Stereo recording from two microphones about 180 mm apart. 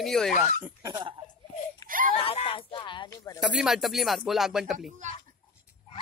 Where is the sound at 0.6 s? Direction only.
20° right (ahead or behind).